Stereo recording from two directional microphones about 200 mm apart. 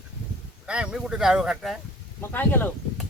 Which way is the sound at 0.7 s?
5° right (ahead or behind).